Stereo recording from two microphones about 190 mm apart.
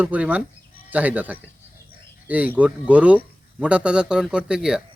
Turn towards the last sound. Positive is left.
turn(degrees=-5)  # may be behind; listen again after turning